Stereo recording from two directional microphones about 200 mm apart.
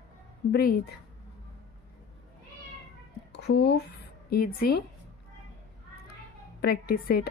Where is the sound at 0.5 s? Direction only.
45° left (ahead or behind).